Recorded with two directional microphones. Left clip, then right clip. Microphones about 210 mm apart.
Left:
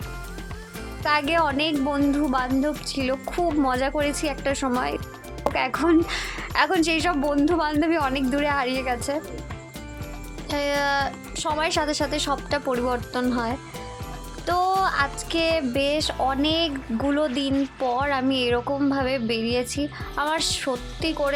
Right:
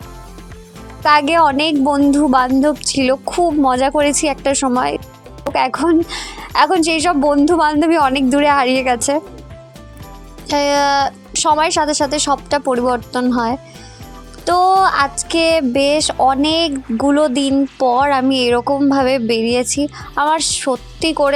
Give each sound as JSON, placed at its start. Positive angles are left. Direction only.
{"t": 1.0, "sound": "speech", "side_deg": -35}
{"t": 4.9, "sound": "music", "side_deg": 0}
{"t": 5.5, "sound": "speech", "side_deg": -30}
{"t": 10.4, "sound": "speech", "side_deg": -35}